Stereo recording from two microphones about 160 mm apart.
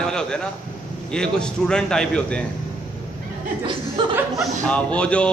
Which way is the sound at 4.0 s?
30° right (ahead or behind).